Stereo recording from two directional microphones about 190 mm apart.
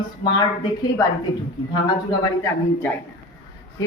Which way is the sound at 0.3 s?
25° left (ahead or behind).